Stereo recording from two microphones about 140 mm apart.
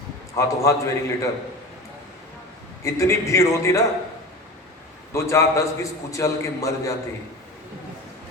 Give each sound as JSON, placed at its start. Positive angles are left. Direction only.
{"t": 0.3, "sound": "a man's voice", "side_deg": 20}
{"t": 2.8, "sound": "a man's voice", "side_deg": 20}
{"t": 5.1, "sound": "a man's voice", "side_deg": 20}